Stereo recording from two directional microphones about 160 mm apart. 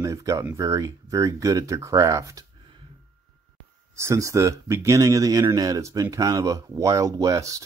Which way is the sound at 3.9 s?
20° right (ahead or behind).